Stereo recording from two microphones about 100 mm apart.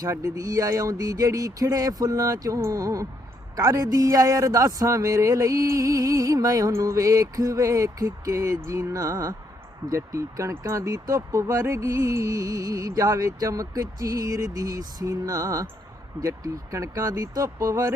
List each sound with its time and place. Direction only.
0.0 s speech: 35° right (ahead or behind)